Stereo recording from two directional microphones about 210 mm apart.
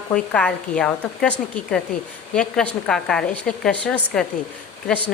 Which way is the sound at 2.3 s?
5° left (ahead or behind).